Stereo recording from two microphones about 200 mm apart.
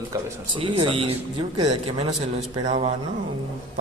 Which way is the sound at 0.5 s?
25° right (ahead or behind).